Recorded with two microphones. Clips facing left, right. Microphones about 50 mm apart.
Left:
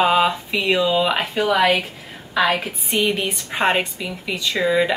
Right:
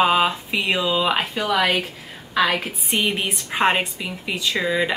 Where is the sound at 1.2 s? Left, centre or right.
Centre.